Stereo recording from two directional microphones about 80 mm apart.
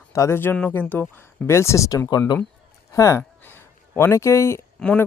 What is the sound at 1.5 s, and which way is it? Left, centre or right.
Speech, left.